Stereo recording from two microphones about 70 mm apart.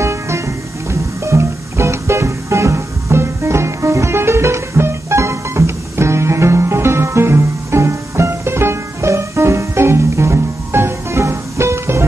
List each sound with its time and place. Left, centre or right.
0.0 s music: right